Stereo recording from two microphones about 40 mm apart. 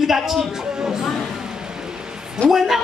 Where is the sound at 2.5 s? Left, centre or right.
Centre.